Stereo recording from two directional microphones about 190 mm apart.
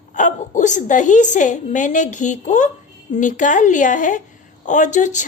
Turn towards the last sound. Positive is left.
turn(degrees=40)  # may be behind; listen again after turning